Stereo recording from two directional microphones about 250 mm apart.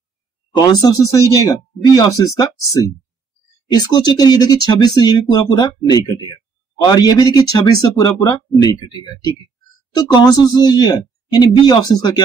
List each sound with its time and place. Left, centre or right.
0.6 s speech: centre